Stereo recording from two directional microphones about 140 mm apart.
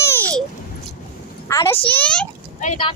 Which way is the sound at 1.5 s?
20° left (ahead or behind).